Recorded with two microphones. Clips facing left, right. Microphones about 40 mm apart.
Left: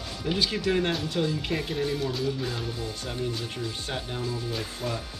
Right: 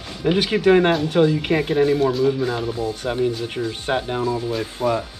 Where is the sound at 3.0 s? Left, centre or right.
Right.